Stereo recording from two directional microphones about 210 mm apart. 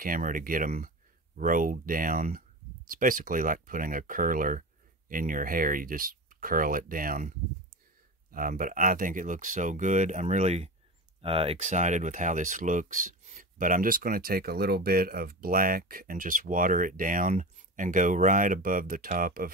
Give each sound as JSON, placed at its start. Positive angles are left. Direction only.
{"t": 0.0, "sound": "speech", "side_deg": -40}